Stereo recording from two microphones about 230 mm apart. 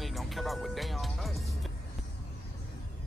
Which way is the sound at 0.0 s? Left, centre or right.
Centre.